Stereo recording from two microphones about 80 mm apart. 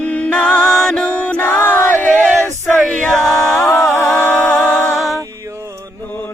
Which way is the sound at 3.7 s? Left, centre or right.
Left.